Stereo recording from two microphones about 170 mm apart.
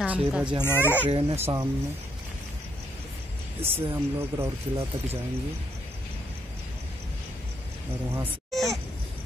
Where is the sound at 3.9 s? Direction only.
15° right (ahead or behind).